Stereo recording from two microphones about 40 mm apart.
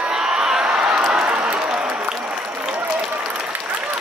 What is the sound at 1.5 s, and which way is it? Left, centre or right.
Applause, right.